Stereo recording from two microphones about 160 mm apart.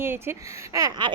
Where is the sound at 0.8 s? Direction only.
20° right (ahead or behind).